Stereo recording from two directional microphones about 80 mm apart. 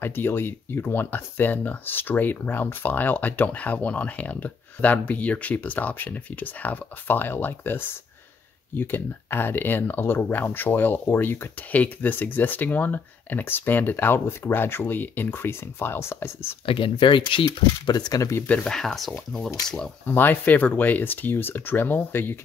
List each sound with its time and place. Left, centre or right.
0.0 s speech: left
16.7 s speech: left
18.5 s speech: centre
20.1 s speech: left